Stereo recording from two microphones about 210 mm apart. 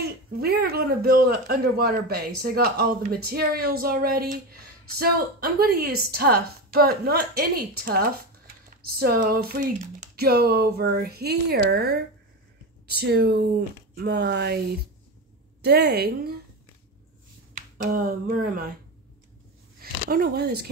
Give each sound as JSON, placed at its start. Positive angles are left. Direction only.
{"t": 0.0, "sound": "speech", "side_deg": -50}
{"t": 15.6, "sound": "speech", "side_deg": -50}
{"t": 17.9, "sound": "speech", "side_deg": -40}
{"t": 19.8, "sound": "speech", "side_deg": -45}